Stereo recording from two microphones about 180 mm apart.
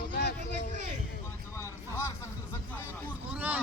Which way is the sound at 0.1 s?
60° left (ahead or behind).